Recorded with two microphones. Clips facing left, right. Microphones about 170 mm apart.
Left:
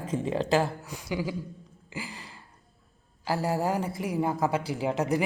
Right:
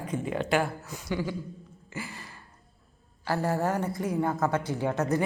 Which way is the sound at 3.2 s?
10° left (ahead or behind).